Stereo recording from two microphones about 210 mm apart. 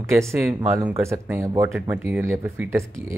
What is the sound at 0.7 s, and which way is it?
Speech, 15° right (ahead or behind).